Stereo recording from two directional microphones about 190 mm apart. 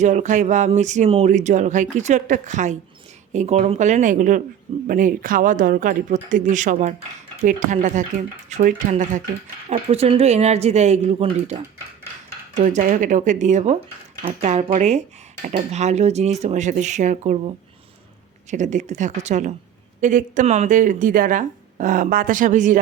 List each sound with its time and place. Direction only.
0.0 s speech: 40° right (ahead or behind)
9.6 s speech: 30° right (ahead or behind)
12.5 s speech: 40° right (ahead or behind)
18.5 s speech: 40° right (ahead or behind)